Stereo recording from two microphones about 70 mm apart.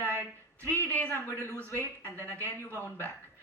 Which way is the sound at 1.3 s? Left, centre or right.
Right.